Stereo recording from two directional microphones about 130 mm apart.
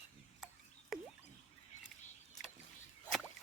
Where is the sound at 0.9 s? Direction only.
5° right (ahead or behind).